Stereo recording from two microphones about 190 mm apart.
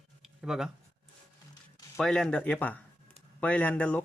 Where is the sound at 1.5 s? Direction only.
20° left (ahead or behind).